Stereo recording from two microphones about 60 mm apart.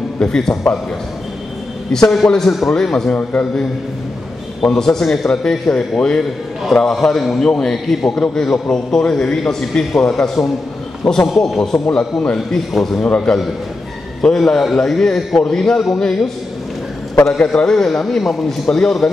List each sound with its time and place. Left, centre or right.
0.2 s a man's voice: centre
1.9 s a man's voice: centre
3.1 s a man's voice: left
4.7 s a man's voice: centre
9.9 s a man's voice: centre
11.1 s a man's voice: centre
11.9 s a man's voice: centre
12.4 s speech: centre
13.0 s a man's voice: centre
17.2 s a man's voice: left
17.5 s a man's voice: centre